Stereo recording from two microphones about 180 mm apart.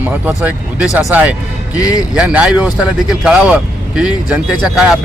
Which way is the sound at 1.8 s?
20° left (ahead or behind).